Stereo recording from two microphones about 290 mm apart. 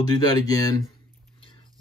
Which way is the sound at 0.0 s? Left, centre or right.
Centre.